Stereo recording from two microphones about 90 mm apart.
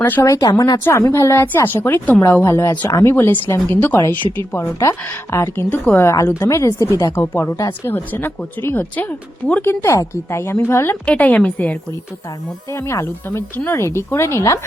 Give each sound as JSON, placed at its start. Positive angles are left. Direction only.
{"t": 0.0, "sound": "speech", "side_deg": 20}
{"t": 0.3, "sound": "a woman's voice", "side_deg": 35}
{"t": 4.2, "sound": "speech", "side_deg": -65}
{"t": 4.5, "sound": "a woman's voice", "side_deg": 30}
{"t": 11.0, "sound": "a woman's voice", "side_deg": 15}
{"t": 12.7, "sound": "speech", "side_deg": 30}